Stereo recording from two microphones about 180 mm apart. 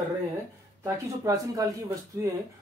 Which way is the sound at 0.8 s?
20° right (ahead or behind).